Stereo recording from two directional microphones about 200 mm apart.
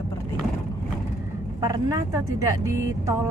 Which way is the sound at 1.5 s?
20° right (ahead or behind).